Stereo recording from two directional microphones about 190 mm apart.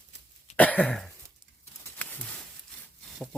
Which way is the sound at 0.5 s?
10° left (ahead or behind).